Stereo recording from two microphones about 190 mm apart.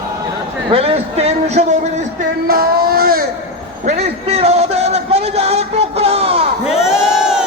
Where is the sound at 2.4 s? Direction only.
50° right (ahead or behind).